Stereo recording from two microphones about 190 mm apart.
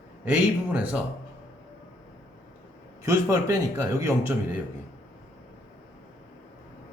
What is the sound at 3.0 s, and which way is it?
Speech, 15° right (ahead or behind).